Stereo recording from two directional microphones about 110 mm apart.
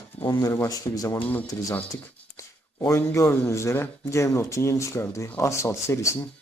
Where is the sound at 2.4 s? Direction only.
30° left (ahead or behind).